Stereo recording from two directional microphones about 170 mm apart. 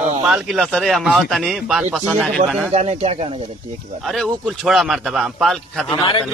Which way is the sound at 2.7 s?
40° right (ahead or behind).